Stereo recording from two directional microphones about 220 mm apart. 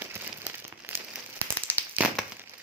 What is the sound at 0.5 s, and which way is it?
Rain on surface, 5° right (ahead or behind).